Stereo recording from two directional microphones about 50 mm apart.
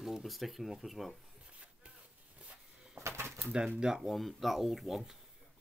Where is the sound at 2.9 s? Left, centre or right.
Right.